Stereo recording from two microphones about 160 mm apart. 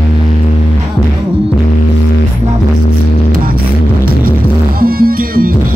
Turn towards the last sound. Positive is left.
turn(degrees=-65)  # may be behind; listen again after turning